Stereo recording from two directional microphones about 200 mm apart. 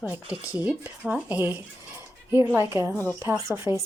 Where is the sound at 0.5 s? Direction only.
5° right (ahead or behind).